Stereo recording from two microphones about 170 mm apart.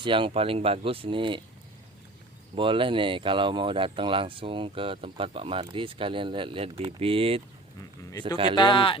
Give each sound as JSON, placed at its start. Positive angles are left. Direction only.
{"t": 0.0, "sound": "speech", "side_deg": -30}
{"t": 2.6, "sound": "speech", "side_deg": -30}
{"t": 8.5, "sound": "speech", "side_deg": 30}